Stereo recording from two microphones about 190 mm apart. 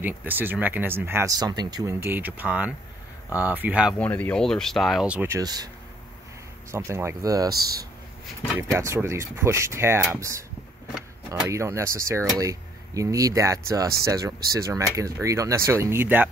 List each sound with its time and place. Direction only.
0.0 s speech: 10° right (ahead or behind)
4.0 s speech: 10° left (ahead or behind); by 5.7 s 20° right (ahead or behind)
6.7 s speech: 15° right (ahead or behind)
7.5 s speech: 55° right (ahead or behind)
8.5 s speech: 15° right (ahead or behind)